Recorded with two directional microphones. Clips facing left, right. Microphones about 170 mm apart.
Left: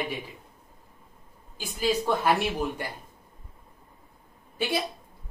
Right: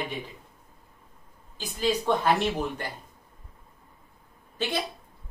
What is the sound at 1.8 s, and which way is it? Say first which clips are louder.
Speech: even; 10° left (ahead or behind).